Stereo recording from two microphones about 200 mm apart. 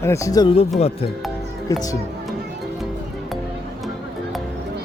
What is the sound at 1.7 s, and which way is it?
Speech, 15° left (ahead or behind).